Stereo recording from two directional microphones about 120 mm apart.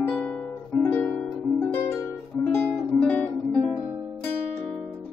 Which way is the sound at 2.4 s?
10° left (ahead or behind).